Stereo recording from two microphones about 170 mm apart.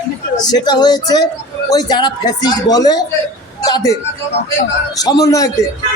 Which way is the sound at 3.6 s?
20° left (ahead or behind).